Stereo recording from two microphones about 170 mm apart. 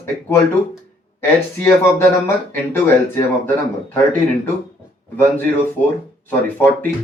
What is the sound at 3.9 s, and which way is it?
Speech, 10° left (ahead or behind).